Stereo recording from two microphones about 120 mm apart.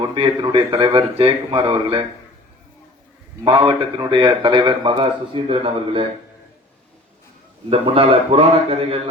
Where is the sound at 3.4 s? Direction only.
50° right (ahead or behind).